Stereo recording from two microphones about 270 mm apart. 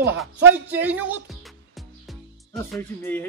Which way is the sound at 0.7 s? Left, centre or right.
Centre.